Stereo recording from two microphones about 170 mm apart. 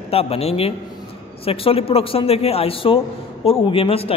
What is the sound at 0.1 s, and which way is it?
A man's voice, 35° left (ahead or behind).